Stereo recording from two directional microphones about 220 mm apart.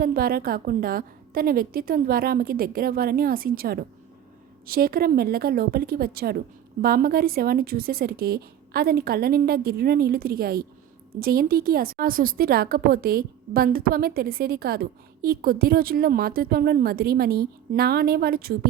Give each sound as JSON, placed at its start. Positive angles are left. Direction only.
{"t": 0.0, "sound": "a woman's voice", "side_deg": -40}